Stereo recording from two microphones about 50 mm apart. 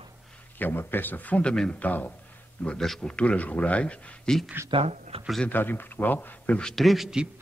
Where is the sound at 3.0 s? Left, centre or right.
Left.